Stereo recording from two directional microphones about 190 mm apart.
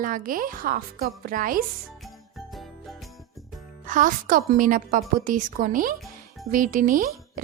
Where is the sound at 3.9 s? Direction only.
45° right (ahead or behind).